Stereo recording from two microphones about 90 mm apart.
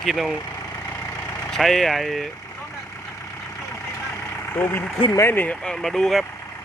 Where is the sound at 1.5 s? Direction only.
5° left (ahead or behind).